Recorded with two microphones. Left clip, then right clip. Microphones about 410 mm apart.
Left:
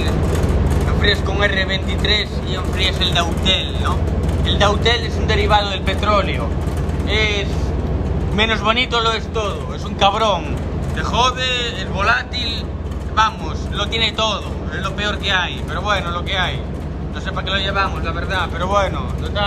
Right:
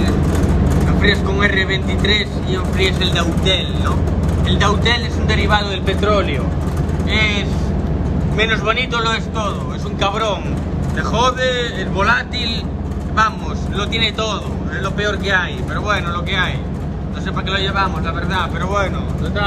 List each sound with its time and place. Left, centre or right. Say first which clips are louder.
1.0 s speech: right 1 dB; centre
6.0 s a man's voice: even; centre
7.1 s a man's voice: right 1 dB; centre
13.7 s a man's voice: even; centre
17.5 s speech: right 1 dB; centre